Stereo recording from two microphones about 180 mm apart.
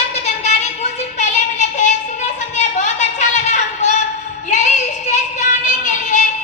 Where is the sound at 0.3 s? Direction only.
40° left (ahead or behind).